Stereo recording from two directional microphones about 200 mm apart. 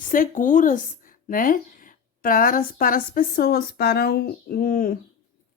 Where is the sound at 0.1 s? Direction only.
40° left (ahead or behind).